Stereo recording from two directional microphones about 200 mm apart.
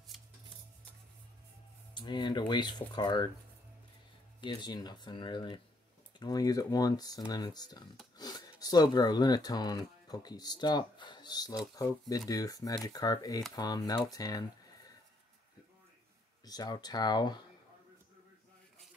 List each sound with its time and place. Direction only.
0.1 s a sound: centre (ahead or behind)
2.0 s speech: 20° left (ahead or behind)
4.4 s speech: 20° left (ahead or behind)
16.4 s speech: 20° left (ahead or behind)